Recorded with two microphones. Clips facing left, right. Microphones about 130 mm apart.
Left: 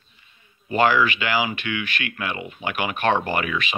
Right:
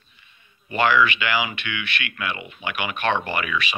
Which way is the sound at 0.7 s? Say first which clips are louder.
Left 1 dB; 45° left (ahead or behind).